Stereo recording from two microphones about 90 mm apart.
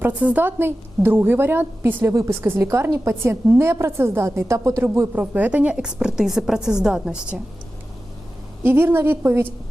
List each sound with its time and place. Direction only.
0.0 s a woman's voice: 15° right (ahead or behind)
8.6 s a woman's voice: 25° right (ahead or behind)